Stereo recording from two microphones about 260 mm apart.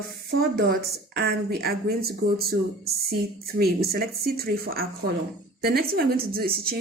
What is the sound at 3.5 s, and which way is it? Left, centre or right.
Speech, right.